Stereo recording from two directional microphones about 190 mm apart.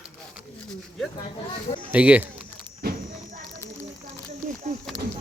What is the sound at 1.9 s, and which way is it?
Speech, 5° right (ahead or behind).